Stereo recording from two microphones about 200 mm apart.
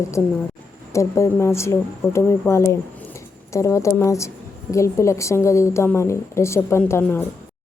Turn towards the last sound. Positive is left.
turn(degrees=10)  # may be behind; listen again after turning